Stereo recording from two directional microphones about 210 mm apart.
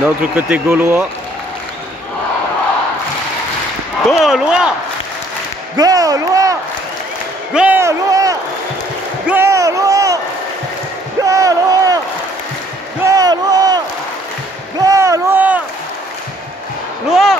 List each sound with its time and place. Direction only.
0.0 s speech: 5° right (ahead or behind)
4.1 s speech: centre (ahead or behind)
5.8 s speech: 15° right (ahead or behind)
7.5 s speech: 10° right (ahead or behind)
9.3 s a sound: 15° right (ahead or behind)
11.2 s a sound: 15° right (ahead or behind)
13.0 s a sound: 15° right (ahead or behind)
14.8 s rowboat: 15° right (ahead or behind)
17.1 s speech: centre (ahead or behind)